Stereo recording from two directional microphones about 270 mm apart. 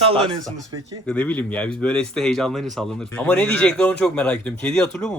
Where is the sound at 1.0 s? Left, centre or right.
Centre.